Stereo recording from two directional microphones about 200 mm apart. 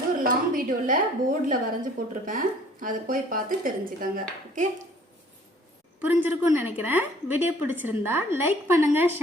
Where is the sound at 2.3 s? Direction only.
45° right (ahead or behind).